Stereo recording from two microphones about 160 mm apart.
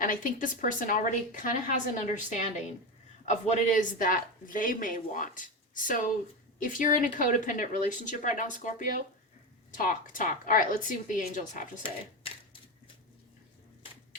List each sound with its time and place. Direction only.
0.0 s speech: 55° left (ahead or behind)